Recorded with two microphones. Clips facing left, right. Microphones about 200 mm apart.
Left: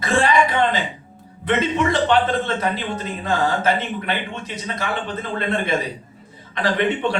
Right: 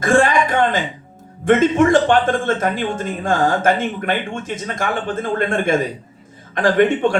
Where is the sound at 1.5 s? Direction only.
45° right (ahead or behind).